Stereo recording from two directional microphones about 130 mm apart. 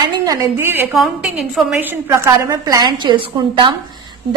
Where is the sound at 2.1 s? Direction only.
25° right (ahead or behind).